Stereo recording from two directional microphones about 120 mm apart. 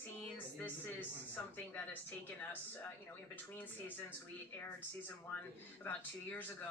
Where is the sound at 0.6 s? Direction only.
15° left (ahead or behind).